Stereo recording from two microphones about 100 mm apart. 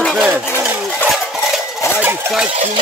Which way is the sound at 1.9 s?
20° right (ahead or behind).